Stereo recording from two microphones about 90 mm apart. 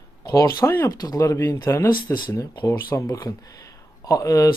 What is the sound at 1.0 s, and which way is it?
Speech, 40° left (ahead or behind).